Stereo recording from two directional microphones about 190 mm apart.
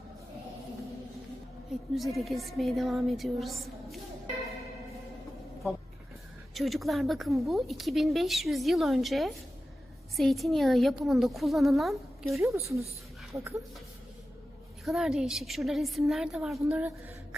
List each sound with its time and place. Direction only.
2.0 s a woman's voice: centre (ahead or behind)
6.5 s a woman's voice: centre (ahead or behind)
12.4 s a woman's voice: 15° right (ahead or behind)
14.8 s a woman's voice: centre (ahead or behind)